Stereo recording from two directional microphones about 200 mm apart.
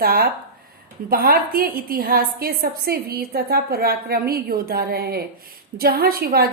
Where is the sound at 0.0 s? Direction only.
50° right (ahead or behind).